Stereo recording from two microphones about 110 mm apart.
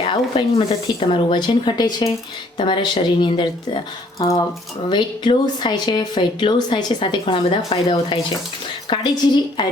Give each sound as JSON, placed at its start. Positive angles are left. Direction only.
{"t": 0.0, "sound": "speech", "side_deg": 50}
{"t": 4.2, "sound": "speech", "side_deg": 35}